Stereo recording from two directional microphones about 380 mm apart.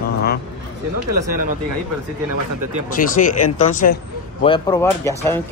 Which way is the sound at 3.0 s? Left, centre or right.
Left.